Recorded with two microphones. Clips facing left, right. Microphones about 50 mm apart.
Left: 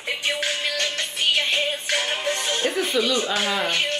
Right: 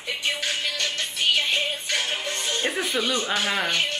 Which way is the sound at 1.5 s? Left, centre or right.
Left.